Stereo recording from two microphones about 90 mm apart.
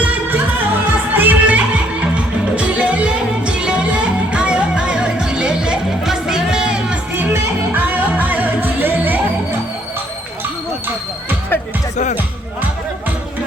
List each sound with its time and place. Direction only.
0.0 s music: 15° right (ahead or behind)
7.2 s music: 20° right (ahead or behind)